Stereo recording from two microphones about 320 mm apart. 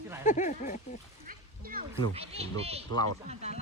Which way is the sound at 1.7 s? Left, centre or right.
Right.